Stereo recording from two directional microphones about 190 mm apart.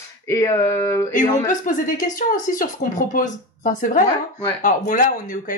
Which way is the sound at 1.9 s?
45° left (ahead or behind).